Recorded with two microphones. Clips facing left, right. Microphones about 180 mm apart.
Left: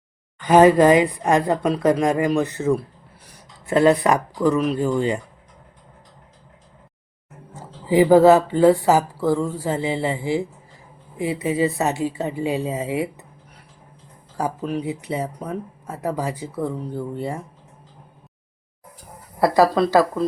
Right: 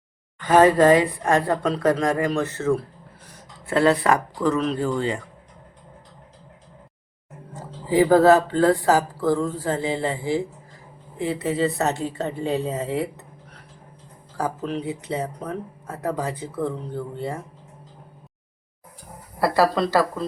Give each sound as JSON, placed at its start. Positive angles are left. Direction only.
{"t": 0.3, "sound": "speech", "side_deg": 15}
{"t": 7.5, "sound": "speech", "side_deg": 15}
{"t": 14.3, "sound": "speech", "side_deg": 15}
{"t": 19.4, "sound": "speech", "side_deg": 15}